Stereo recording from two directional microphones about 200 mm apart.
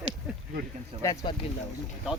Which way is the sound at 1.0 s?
15° left (ahead or behind).